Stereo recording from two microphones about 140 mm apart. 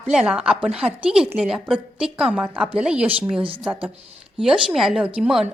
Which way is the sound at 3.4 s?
40° right (ahead or behind).